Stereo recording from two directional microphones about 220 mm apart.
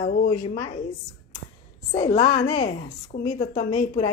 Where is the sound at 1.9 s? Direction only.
25° left (ahead or behind).